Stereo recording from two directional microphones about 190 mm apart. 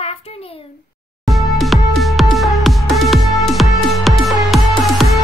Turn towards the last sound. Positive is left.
turn(degrees=0)  # may be behind; listen again after turning